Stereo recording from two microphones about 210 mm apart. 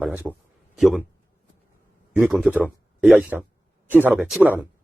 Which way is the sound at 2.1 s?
5° right (ahead or behind).